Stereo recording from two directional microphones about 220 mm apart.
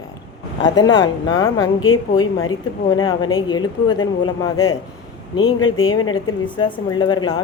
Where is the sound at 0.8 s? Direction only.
60° left (ahead or behind).